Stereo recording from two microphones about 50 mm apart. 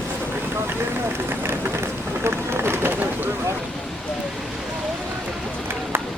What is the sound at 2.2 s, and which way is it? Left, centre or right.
Run, right.